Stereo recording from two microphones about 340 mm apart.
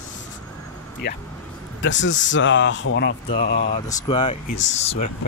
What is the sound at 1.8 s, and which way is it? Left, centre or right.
Speech, left.